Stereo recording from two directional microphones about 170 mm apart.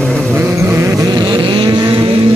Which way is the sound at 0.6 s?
15° right (ahead or behind).